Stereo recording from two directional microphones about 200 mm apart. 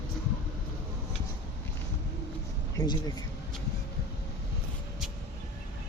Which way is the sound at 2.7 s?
20° left (ahead or behind).